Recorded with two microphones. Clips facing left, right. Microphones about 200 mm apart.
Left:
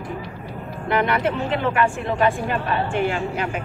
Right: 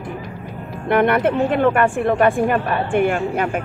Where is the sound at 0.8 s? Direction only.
55° right (ahead or behind).